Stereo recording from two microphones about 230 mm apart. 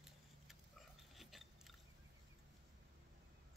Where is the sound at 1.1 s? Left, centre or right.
Centre.